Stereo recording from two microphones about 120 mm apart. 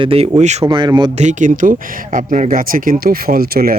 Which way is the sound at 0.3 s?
75° right (ahead or behind).